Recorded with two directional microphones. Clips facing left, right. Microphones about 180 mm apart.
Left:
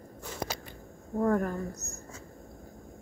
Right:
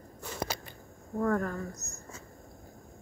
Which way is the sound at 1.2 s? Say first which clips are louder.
Left 2 dB; 15° left (ahead or behind).